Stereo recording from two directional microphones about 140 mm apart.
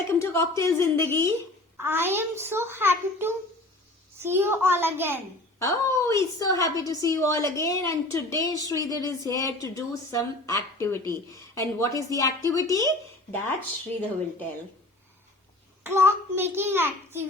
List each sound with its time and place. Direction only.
0.1 s a woman's voice: 20° left (ahead or behind)
1.8 s a child's voice: 15° right (ahead or behind)
5.5 s a woman's voice: 20° left (ahead or behind)
15.8 s a child's voice: 15° right (ahead or behind)